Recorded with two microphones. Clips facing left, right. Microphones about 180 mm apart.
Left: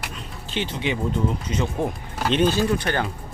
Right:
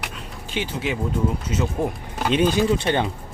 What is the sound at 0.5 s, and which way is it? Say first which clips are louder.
Speech: even; 10° right (ahead or behind).